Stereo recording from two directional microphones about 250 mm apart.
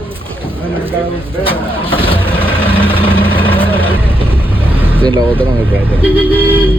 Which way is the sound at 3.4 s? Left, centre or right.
Centre.